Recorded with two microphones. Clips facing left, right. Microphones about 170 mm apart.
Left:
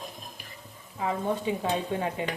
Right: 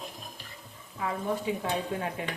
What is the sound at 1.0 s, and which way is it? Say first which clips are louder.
Stir: left 2 dB; 25° left (ahead or behind).